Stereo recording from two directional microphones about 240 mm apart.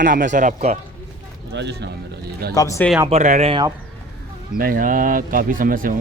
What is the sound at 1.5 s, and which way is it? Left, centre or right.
Speech, right.